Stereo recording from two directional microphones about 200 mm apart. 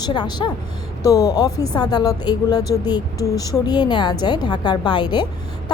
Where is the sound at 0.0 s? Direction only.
20° left (ahead or behind).